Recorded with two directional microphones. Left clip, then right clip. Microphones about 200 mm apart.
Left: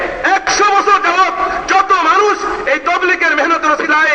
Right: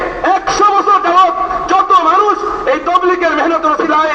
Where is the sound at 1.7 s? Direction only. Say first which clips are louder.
Right 1 dB; 60° left (ahead or behind).